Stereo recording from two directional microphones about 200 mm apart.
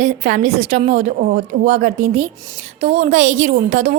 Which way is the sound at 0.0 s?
40° right (ahead or behind).